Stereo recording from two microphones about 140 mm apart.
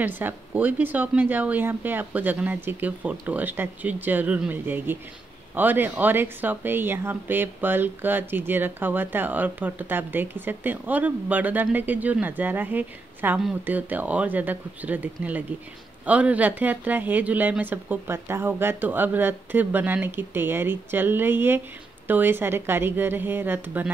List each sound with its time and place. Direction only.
0.0 s a woman's voice: 15° right (ahead or behind)